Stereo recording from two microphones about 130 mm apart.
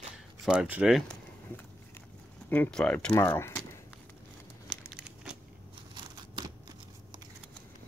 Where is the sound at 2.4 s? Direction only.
15° left (ahead or behind).